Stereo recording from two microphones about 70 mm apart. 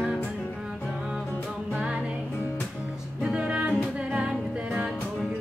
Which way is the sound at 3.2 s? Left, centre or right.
Centre.